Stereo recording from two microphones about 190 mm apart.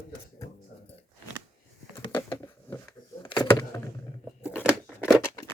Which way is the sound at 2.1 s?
15° left (ahead or behind).